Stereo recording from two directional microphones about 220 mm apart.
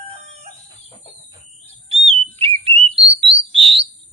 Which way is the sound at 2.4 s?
25° right (ahead or behind).